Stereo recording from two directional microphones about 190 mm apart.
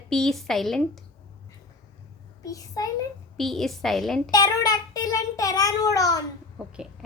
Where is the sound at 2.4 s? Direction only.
20° left (ahead or behind).